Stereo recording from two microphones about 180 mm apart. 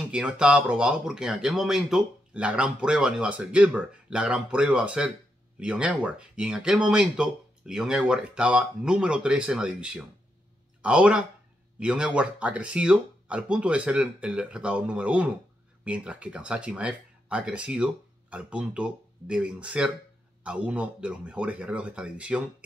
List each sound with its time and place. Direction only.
0.1 s speech: 5° right (ahead or behind)